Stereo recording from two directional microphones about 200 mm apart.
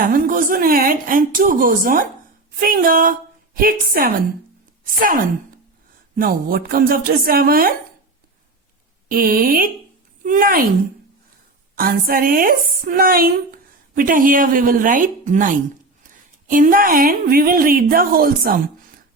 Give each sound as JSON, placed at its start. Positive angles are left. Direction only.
{"t": 0.0, "sound": "a woman's voice", "side_deg": -45}
{"t": 6.1, "sound": "a woman's voice", "side_deg": -45}
{"t": 9.0, "sound": "a woman's voice", "side_deg": -45}
{"t": 11.8, "sound": "a woman's voice", "side_deg": -45}